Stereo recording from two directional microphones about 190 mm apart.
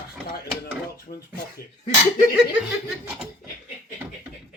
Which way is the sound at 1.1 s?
40° left (ahead or behind).